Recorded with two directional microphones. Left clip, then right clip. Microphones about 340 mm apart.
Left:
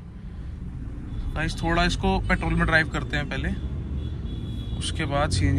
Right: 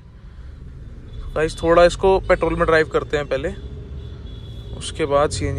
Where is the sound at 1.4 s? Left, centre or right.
Right.